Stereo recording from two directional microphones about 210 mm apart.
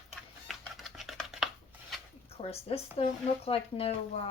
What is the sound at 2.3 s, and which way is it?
Speech, 30° left (ahead or behind).